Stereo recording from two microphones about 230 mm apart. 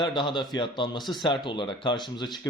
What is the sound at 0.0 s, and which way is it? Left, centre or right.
Speech, left.